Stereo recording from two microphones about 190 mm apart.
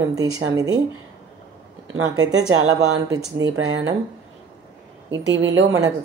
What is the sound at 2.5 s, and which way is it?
Speech, 90° right.